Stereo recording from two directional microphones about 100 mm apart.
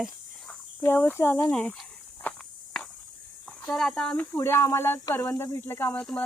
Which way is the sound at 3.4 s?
10° left (ahead or behind).